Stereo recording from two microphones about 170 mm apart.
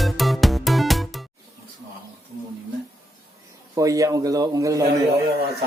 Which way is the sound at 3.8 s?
20° right (ahead or behind).